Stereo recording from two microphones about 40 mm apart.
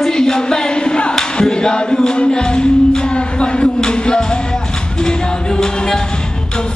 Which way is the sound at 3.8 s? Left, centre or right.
Left.